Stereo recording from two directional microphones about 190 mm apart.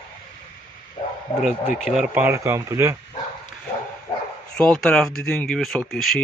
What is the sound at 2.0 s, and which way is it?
Speech, 10° right (ahead or behind).